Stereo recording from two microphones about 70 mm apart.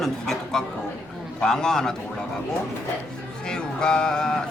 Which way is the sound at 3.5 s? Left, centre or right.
Centre.